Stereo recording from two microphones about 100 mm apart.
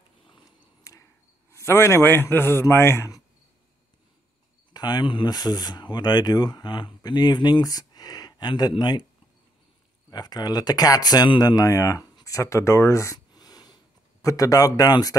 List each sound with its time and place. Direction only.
0.9 s a sound: 35° left (ahead or behind)
1.5 s a man's voice: 25° left (ahead or behind)
4.7 s speech: 45° left (ahead or behind)
10.1 s speech: 45° left (ahead or behind)
13.3 s a sound: 40° left (ahead or behind)
14.2 s speech: 35° left (ahead or behind)